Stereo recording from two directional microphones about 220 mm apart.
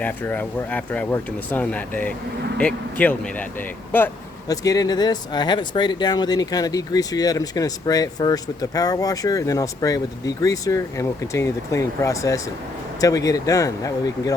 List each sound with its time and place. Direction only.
0.0 s speech: 10° left (ahead or behind)